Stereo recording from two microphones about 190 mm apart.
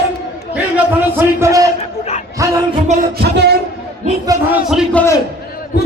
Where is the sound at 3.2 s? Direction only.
60° right (ahead or behind).